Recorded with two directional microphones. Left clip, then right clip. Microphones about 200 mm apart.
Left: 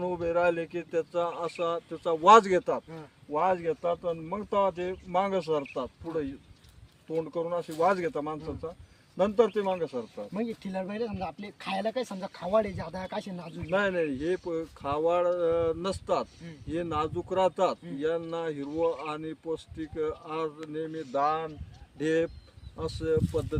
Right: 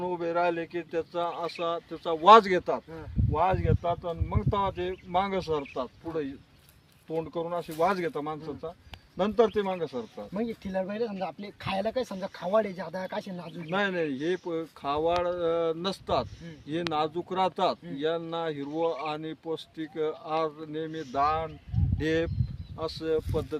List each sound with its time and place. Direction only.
0.0 s speech: 20° right (ahead or behind)
10.3 s speech: 20° left (ahead or behind)
13.7 s speech: 25° right (ahead or behind)